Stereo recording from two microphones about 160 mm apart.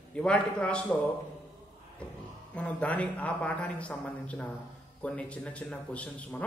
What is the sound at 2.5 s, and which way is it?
Speech, 10° left (ahead or behind).